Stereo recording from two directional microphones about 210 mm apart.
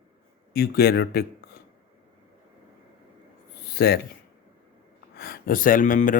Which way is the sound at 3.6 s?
50° left (ahead or behind).